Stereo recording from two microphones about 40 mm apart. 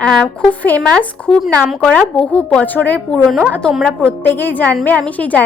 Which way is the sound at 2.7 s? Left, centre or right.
Left.